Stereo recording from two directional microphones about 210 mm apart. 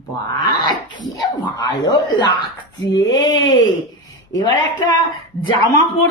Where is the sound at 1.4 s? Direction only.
20° left (ahead or behind).